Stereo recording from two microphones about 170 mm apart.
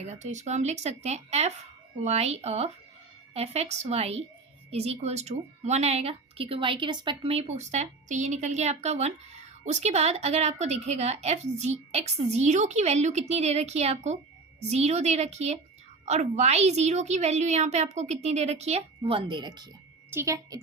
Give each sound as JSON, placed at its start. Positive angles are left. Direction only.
{"t": 0.0, "sound": "a woman's voice", "side_deg": -45}